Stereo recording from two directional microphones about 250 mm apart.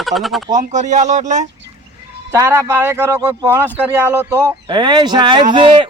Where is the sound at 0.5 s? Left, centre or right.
Right.